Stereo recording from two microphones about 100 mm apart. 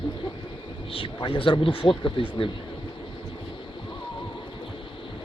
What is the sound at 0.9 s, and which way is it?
Speech, 60° left (ahead or behind).